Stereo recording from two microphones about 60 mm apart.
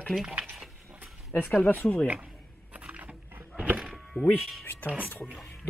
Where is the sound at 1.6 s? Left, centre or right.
Left.